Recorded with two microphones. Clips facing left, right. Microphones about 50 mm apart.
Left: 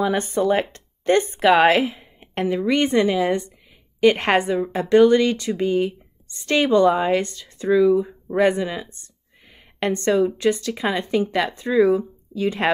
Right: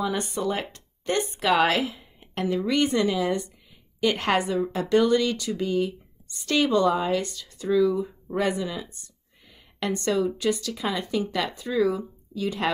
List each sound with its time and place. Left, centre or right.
0.0 s speech: left
7.7 s speech: centre
12.4 s speech: left